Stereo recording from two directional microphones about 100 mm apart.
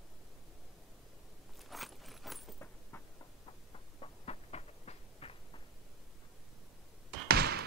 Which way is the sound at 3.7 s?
80° left.